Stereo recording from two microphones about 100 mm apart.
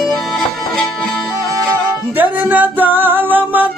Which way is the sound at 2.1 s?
15° right (ahead or behind).